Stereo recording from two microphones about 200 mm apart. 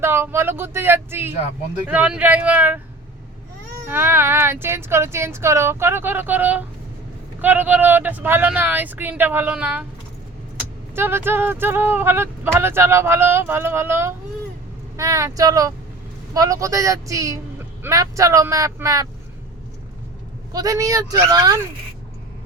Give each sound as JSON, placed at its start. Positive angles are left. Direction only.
{"t": 0.0, "sound": "speech", "side_deg": -10}
{"t": 10.9, "sound": "speech", "side_deg": -10}
{"t": 20.5, "sound": "speech", "side_deg": -20}